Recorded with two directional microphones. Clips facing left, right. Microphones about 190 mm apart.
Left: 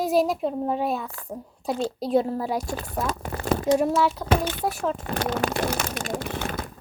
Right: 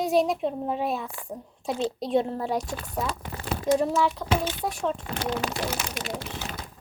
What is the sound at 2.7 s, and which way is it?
Speech, 45° left (ahead or behind).